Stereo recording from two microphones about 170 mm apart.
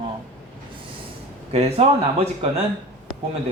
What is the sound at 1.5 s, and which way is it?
A woman's voice, 35° right (ahead or behind).